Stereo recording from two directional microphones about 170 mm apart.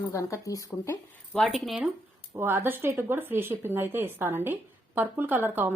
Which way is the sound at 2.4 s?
15° right (ahead or behind).